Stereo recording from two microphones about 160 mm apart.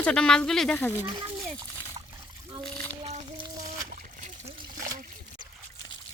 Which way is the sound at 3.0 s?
40° right (ahead or behind).